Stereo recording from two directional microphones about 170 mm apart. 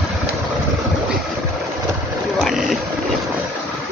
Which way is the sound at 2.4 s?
Centre (ahead or behind).